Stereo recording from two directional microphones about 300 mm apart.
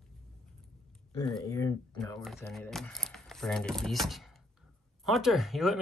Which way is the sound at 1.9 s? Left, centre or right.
Centre.